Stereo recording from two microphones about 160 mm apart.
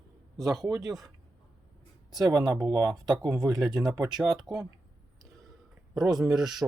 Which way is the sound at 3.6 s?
Centre (ahead or behind).